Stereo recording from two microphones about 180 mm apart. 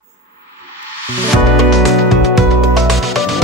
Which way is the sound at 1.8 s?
Centre (ahead or behind).